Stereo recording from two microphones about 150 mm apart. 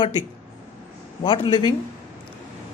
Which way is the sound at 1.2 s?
30° left (ahead or behind).